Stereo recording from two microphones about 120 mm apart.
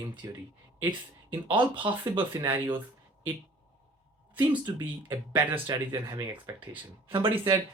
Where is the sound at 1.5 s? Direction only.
45° right (ahead or behind).